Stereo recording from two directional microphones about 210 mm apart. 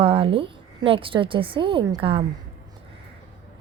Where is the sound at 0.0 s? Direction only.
25° right (ahead or behind).